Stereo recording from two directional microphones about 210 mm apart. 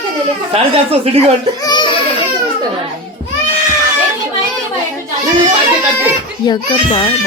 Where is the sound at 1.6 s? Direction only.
20° left (ahead or behind).